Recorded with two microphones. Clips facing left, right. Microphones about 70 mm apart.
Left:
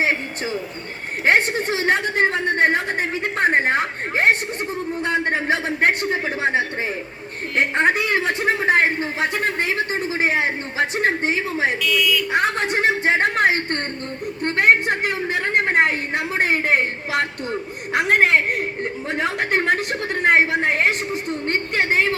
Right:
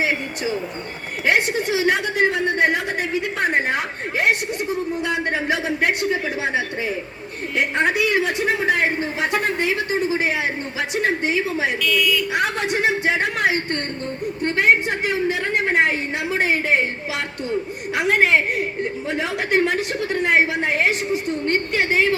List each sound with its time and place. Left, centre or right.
1.2 s a sound: left
5.0 s a woman's voice: left
11.8 s speech: centre
12.3 s a woman's voice: left